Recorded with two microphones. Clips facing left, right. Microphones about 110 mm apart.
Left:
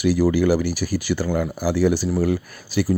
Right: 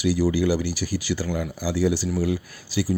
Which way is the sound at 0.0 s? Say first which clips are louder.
Left 3 dB; 55° left (ahead or behind).